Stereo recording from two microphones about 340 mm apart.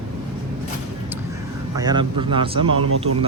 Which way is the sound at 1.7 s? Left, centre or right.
Centre.